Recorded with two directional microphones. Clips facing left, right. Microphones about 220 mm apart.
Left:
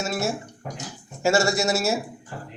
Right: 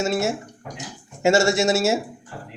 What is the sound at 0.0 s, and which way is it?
Speech, 25° right (ahead or behind).